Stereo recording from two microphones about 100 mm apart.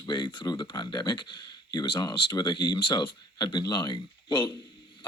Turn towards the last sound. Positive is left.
turn(degrees=50)  # may be behind; listen again after turning